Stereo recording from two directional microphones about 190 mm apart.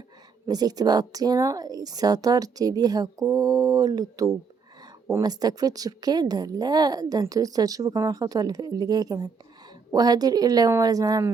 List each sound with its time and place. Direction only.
0.4 s speech: 20° right (ahead or behind)